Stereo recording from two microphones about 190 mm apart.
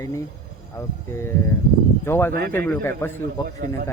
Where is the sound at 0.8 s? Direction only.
15° left (ahead or behind).